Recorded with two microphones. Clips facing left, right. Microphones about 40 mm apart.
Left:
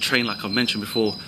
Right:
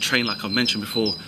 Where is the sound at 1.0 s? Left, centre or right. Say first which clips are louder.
Left 2 dB; left.